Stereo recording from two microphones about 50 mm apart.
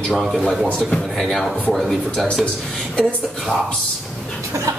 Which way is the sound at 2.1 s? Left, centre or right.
Left.